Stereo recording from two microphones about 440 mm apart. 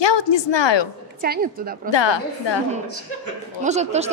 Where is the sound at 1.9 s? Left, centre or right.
Left.